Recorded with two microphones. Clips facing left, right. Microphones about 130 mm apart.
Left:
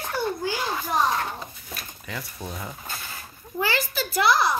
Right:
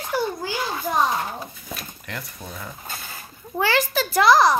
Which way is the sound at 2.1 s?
10° left (ahead or behind).